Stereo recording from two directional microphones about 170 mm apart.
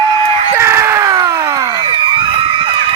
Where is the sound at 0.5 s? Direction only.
15° right (ahead or behind); by 2.7 s 30° right (ahead or behind).